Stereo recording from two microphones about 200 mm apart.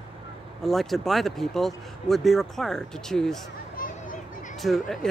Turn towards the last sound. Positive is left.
turn(degrees=0)  # may be behind; listen again after turning